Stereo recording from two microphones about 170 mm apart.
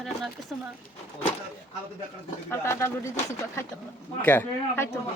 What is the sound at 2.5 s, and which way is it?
Speech, 15° left (ahead or behind).